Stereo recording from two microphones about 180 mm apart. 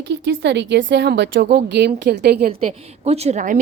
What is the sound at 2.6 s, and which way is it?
Speech, 35° right (ahead or behind).